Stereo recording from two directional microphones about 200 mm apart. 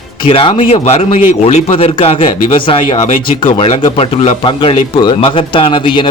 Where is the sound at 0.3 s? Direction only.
25° left (ahead or behind).